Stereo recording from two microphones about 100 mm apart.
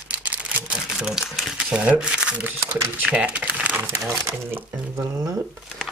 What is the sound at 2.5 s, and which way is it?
Speech, 25° right (ahead or behind).